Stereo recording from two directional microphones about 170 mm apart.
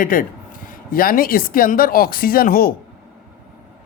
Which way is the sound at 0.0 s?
55° left (ahead or behind).